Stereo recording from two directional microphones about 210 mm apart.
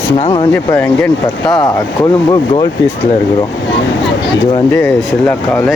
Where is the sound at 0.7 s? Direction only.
5° left (ahead or behind).